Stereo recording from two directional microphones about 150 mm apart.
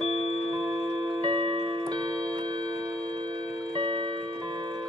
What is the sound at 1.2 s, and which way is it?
Clock, 30° right (ahead or behind).